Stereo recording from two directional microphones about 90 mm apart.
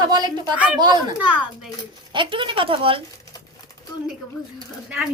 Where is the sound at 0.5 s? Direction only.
15° right (ahead or behind).